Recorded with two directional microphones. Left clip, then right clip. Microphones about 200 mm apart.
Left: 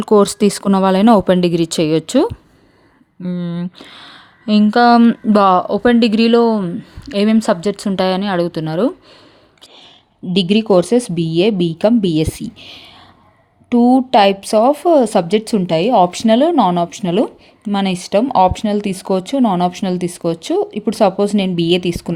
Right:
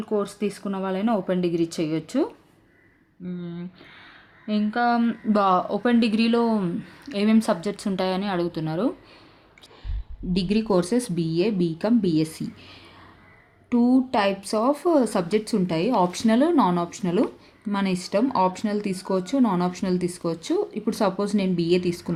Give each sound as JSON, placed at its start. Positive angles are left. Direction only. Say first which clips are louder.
{"t": 0.0, "sound": "speech", "louder": "left 14 dB", "side_deg": 50}
{"t": 5.3, "sound": "a woman's voice", "louder": "left 8 dB", "side_deg": 40}
{"t": 10.3, "sound": "a woman's voice", "louder": "left 10 dB", "side_deg": 35}